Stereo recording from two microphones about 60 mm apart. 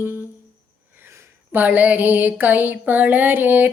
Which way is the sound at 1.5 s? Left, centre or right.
Right.